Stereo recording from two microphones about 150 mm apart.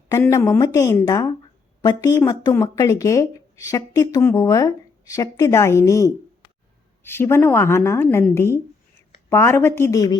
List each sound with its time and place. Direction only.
0.1 s a woman's voice: 20° left (ahead or behind)